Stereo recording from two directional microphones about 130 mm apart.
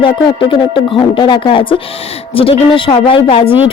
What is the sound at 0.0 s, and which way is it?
A woman's voice, 40° left (ahead or behind).